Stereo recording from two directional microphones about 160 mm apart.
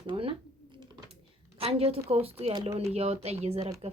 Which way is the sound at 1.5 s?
35° right (ahead or behind).